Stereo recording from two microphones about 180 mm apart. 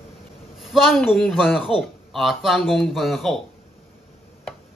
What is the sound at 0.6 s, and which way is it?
Speech, centre (ahead or behind).